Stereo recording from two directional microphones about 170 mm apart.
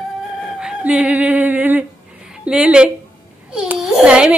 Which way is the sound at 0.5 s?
5° right (ahead or behind).